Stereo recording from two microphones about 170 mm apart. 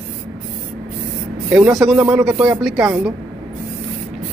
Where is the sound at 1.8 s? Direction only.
5° right (ahead or behind).